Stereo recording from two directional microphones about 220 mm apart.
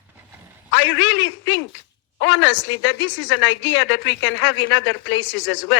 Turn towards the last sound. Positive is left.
turn(degrees=60)  # may be behind; listen again after turning